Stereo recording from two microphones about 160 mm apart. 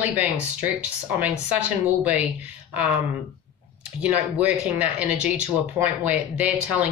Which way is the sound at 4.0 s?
5° right (ahead or behind).